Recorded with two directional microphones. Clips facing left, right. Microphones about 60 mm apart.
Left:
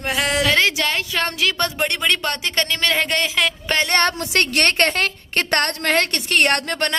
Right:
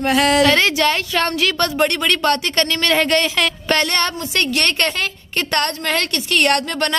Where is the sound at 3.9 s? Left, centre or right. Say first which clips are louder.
Left 2 dB; left.